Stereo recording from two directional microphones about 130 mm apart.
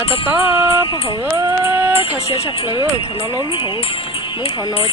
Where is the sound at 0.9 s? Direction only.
40° left (ahead or behind).